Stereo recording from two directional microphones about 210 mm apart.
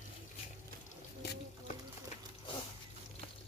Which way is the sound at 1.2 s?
50° left (ahead or behind).